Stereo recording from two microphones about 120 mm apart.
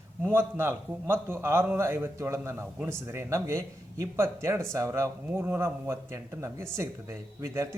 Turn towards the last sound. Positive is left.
turn(degrees=-25)  # may be behind; listen again after turning